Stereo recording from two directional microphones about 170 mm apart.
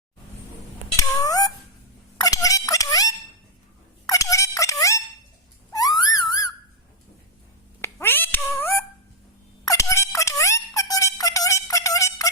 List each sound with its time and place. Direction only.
0.9 s cat: 20° left (ahead or behind)
2.1 s a sound: 20° left (ahead or behind)
7.8 s cat: 15° left (ahead or behind)
9.6 s music: 15° left (ahead or behind)